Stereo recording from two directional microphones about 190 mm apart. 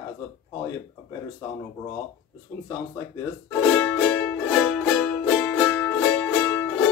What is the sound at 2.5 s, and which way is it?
Speech, 15° left (ahead or behind).